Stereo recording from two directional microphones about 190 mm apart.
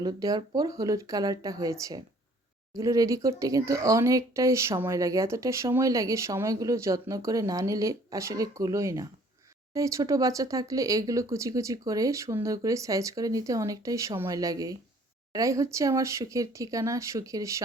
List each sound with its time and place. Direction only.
0.0 s speech: 20° right (ahead or behind)